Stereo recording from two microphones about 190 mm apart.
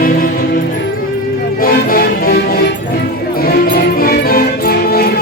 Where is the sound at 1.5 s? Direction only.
50° left (ahead or behind).